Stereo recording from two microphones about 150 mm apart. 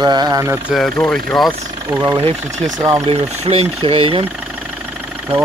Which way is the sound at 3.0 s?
45° right (ahead or behind).